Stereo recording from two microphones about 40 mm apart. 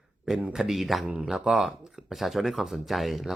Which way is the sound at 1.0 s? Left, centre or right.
Right.